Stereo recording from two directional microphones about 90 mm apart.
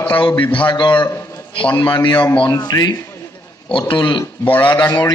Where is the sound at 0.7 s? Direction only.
60° left (ahead or behind).